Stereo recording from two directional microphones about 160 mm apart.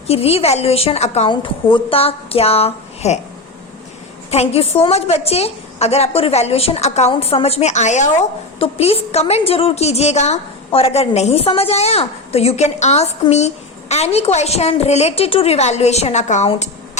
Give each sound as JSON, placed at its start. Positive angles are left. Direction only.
{"t": 0.1, "sound": "a woman's voice", "side_deg": 40}
{"t": 1.3, "sound": "a woman's voice", "side_deg": 30}
{"t": 4.3, "sound": "a woman's voice", "side_deg": 40}